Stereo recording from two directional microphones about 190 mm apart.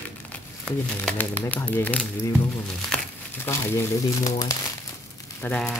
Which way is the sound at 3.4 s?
15° left (ahead or behind).